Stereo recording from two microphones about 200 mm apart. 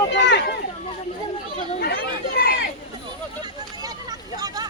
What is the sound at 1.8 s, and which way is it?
Speech, 50° left (ahead or behind).